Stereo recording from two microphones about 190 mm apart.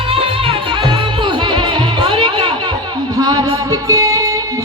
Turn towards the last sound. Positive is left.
turn(degrees=-15)  # may be behind; listen again after turning